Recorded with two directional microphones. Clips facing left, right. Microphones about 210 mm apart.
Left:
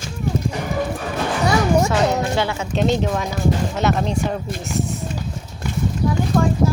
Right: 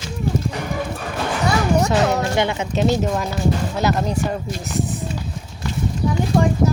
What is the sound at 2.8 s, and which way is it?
Speech, 5° right (ahead or behind).